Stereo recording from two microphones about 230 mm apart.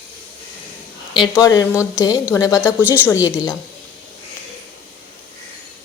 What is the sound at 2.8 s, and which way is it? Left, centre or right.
Speech, centre.